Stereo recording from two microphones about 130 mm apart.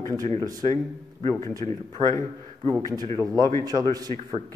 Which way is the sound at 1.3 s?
25° left (ahead or behind).